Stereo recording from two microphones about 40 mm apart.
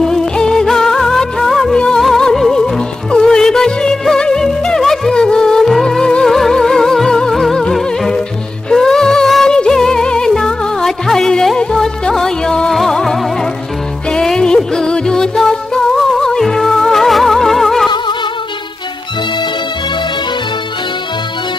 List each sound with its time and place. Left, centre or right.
0.0 s music: centre
0.7 s music of bollywood: centre
2.0 s music: centre
8.7 s music: centre
9.5 s music: centre